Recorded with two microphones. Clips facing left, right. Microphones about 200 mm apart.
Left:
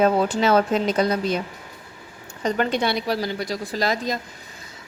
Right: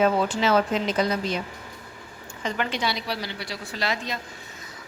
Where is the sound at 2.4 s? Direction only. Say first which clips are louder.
Left 6 dB; 40° left (ahead or behind).